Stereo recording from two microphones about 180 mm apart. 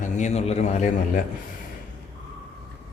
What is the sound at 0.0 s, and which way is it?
Speech, 40° left (ahead or behind).